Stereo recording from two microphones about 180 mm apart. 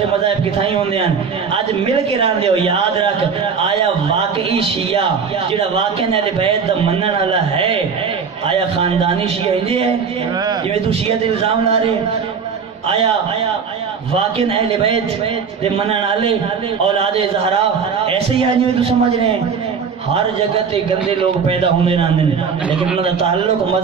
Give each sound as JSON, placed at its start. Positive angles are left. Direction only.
{"t": 0.6, "sound": "a man's voice", "side_deg": -30}
{"t": 14.1, "sound": "a man's voice", "side_deg": -35}
{"t": 20.7, "sound": "a man's voice", "side_deg": -30}